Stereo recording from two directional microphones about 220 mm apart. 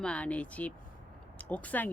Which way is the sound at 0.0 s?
5° left (ahead or behind).